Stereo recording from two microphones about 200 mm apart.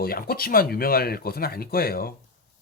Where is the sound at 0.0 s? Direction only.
50° left (ahead or behind).